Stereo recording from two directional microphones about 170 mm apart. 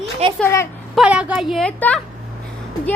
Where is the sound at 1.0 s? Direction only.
5° right (ahead or behind).